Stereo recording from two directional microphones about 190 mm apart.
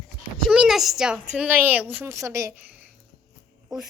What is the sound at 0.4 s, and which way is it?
A woman's voice, 5° right (ahead or behind).